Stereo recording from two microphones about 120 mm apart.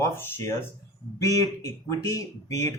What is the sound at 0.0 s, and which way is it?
Speech, 20° left (ahead or behind).